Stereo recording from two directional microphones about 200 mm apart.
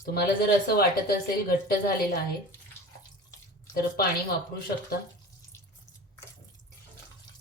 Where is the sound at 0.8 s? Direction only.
50° left (ahead or behind).